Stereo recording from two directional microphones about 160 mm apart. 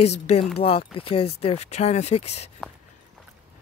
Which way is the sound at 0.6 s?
35° left (ahead or behind).